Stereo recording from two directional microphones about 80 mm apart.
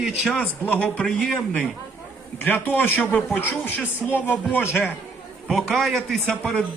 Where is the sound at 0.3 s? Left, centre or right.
Centre.